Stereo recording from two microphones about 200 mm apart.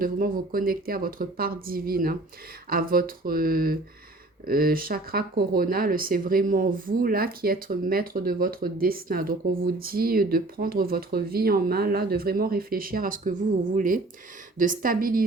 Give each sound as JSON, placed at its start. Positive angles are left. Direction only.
{"t": 0.0, "sound": "speech", "side_deg": -45}